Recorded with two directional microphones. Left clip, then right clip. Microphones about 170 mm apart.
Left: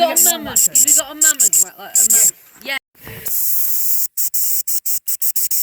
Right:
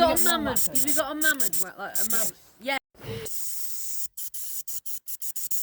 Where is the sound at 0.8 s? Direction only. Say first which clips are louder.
Left 3 dB; 65° right (ahead or behind).